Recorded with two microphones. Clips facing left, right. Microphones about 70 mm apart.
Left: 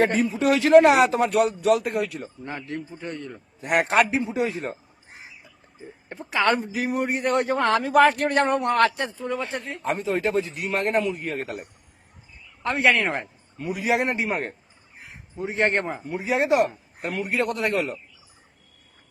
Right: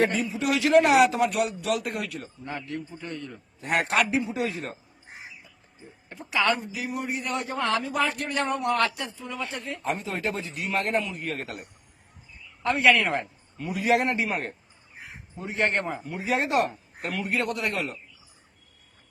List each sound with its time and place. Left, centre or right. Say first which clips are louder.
0.0 s a man's voice: left 4 dB; left
6.1 s a man's voice: left 3 dB; left
12.6 s a man's voice: even; left
13.7 s speech: right 1 dB; centre
14.0 s a man's voice: left 2 dB; left
16.2 s speech: left 4 dB; centre
17.1 s a man's voice: left 3 dB; left